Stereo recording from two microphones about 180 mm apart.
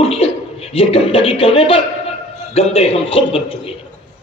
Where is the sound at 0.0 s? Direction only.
35° left (ahead or behind).